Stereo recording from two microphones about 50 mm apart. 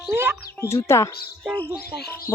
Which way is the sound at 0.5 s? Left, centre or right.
Left.